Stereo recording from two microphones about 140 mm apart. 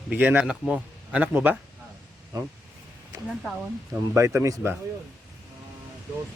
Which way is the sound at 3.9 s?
20° right (ahead or behind).